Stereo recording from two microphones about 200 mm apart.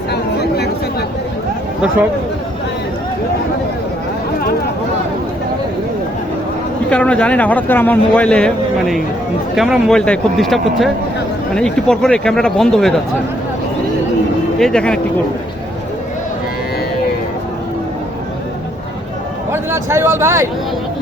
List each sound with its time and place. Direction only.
0.1 s a sound: 55° left (ahead or behind)
6.9 s a man's voice: 5° left (ahead or behind)
14.6 s speech: 5° left (ahead or behind)
19.5 s a man's voice: 15° right (ahead or behind)